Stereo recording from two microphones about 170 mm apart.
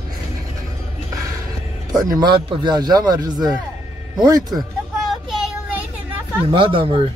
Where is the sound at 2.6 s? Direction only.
25° right (ahead or behind).